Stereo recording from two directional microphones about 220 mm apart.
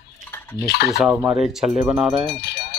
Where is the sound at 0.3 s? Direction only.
10° left (ahead or behind).